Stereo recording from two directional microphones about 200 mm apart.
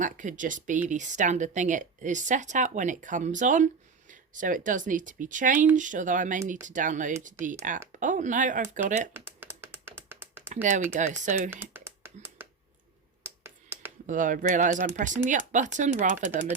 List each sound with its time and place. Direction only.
0.0 s speech: 40° right (ahead or behind)
9.1 s a sound: 10° right (ahead or behind)
10.5 s speech: 40° right (ahead or behind)
11.5 s computer keyboard: 10° right (ahead or behind)
14.1 s speech: 40° right (ahead or behind)